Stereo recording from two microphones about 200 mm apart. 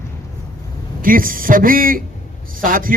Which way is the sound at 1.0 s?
45° right (ahead or behind).